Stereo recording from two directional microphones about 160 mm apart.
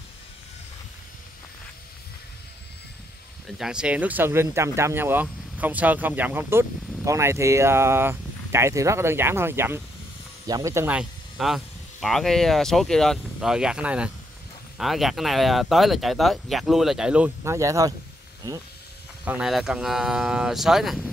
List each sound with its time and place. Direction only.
3.4 s speech: 5° right (ahead or behind)
11.0 s speech: centre (ahead or behind)
17.4 s speech: 20° right (ahead or behind)
19.2 s speech: 5° right (ahead or behind)